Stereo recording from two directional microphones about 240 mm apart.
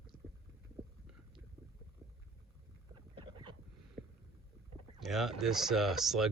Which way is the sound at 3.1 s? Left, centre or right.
Centre.